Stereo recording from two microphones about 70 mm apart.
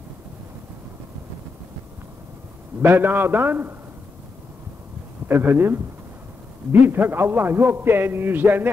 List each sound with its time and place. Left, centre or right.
2.8 s a man's voice: right
5.3 s a man's voice: right